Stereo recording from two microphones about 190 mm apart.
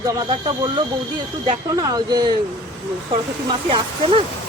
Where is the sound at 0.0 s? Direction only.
20° right (ahead or behind).